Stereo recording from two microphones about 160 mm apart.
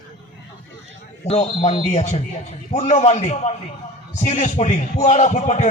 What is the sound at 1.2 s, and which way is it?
Speech, 40° left (ahead or behind).